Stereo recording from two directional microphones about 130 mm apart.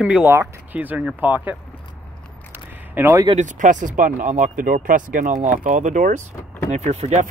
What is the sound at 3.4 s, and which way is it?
Speech, 75° right (ahead or behind).